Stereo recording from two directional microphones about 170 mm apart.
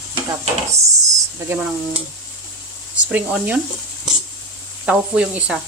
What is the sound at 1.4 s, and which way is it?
Speech, 10° right (ahead or behind).